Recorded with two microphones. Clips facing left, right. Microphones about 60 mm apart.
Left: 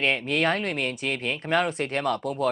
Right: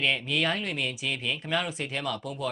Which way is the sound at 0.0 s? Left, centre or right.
Left.